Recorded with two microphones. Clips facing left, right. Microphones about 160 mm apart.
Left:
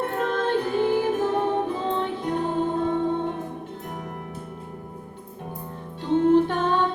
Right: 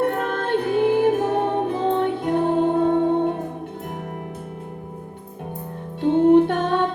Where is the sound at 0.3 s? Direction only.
60° right (ahead or behind).